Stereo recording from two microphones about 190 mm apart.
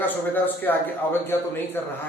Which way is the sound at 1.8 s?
10° left (ahead or behind).